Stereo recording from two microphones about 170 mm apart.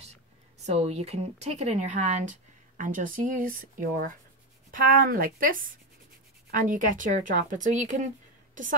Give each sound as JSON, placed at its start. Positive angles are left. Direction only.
{"t": 0.7, "sound": "a woman's voice", "side_deg": -40}
{"t": 6.7, "sound": "speech", "side_deg": -50}